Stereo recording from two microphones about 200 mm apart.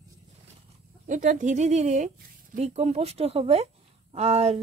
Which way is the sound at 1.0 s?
40° right (ahead or behind).